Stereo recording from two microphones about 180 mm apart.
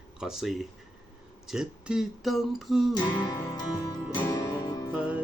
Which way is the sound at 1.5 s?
5° right (ahead or behind).